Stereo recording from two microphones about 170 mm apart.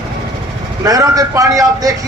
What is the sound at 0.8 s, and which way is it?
Speech, 20° right (ahead or behind).